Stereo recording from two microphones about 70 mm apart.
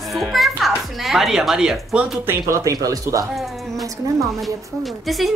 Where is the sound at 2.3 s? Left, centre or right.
Right.